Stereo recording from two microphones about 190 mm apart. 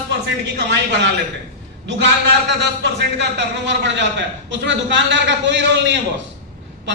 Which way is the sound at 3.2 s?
65° right (ahead or behind).